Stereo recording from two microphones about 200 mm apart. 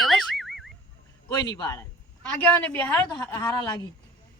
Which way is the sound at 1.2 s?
20° left (ahead or behind).